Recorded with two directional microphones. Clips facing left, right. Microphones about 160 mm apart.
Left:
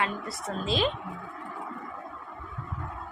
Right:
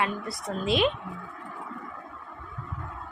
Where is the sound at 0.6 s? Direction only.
30° left (ahead or behind).